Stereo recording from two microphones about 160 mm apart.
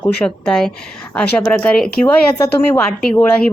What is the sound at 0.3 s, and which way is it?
Speech, 5° left (ahead or behind).